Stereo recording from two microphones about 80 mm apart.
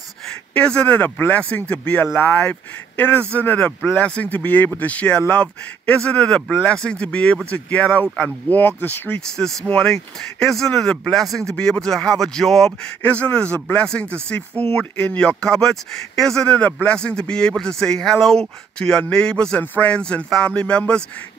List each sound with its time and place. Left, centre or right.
0.3 s a man's voice: centre
9.4 s a man's voice: centre
13.0 s a man's voice: centre